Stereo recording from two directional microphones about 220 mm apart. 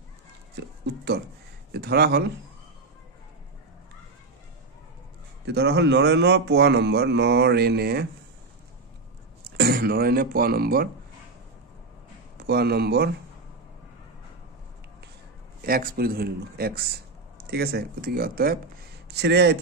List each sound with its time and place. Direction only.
0.6 s speech: 50° right (ahead or behind)
5.4 s speech: 50° right (ahead or behind)
9.6 s speech: 45° right (ahead or behind)
12.4 s speech: 45° right (ahead or behind)
15.6 s speech: 40° right (ahead or behind)